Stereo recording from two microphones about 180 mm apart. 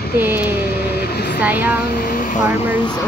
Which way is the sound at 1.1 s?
65° left (ahead or behind).